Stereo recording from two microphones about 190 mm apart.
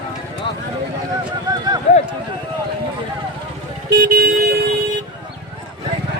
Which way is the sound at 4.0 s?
55° right (ahead or behind).